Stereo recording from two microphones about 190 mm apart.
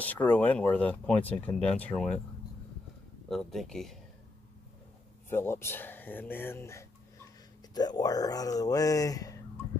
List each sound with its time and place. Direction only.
0.0 s speech: 10° left (ahead or behind)
3.3 s speech: centre (ahead or behind)
5.3 s speech: 10° left (ahead or behind)